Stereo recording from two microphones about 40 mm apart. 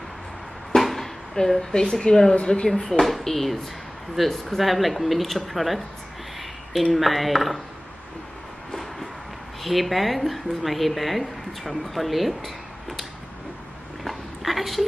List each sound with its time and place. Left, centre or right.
0.7 s a sound: centre
1.9 s a woman's voice: centre
2.3 s speech: left
3.0 s a woman's voice: centre
9.6 s a woman's voice: centre
14.0 s a sound: centre